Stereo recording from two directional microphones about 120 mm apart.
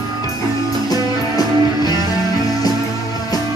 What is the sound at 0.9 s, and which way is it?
Music, 35° left (ahead or behind).